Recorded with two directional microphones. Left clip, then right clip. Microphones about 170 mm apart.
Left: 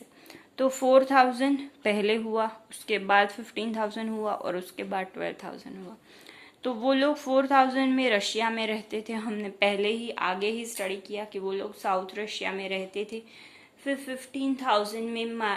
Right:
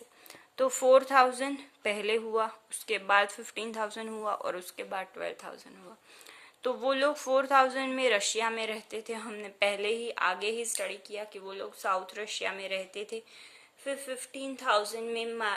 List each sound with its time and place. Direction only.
0.5 s speech: 40° right (ahead or behind)
6.6 s speech: 40° right (ahead or behind)